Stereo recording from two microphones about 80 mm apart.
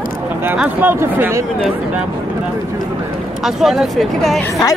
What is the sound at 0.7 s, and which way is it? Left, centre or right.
Speech, right.